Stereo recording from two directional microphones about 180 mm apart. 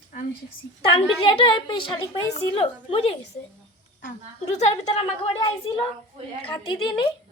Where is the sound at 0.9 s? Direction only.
30° left (ahead or behind).